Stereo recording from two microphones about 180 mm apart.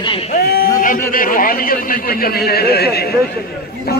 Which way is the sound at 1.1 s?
50° left (ahead or behind).